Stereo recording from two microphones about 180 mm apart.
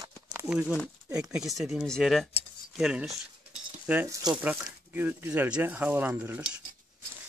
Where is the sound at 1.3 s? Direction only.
5° right (ahead or behind).